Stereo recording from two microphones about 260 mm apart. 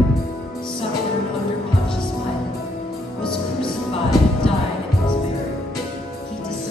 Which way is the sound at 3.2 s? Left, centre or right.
Centre.